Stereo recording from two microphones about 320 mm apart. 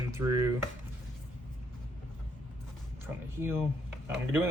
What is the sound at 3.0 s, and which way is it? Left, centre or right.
Speech, centre.